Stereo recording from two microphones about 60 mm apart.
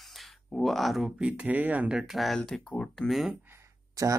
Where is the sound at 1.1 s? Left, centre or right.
Centre.